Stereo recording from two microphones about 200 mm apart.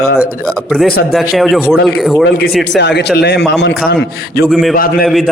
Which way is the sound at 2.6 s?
60° left (ahead or behind).